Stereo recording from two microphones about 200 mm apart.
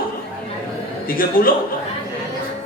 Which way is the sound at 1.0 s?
45° left (ahead or behind).